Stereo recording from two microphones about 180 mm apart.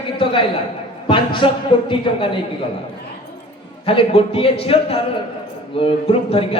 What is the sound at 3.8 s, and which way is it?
A man's voice, 30° left (ahead or behind).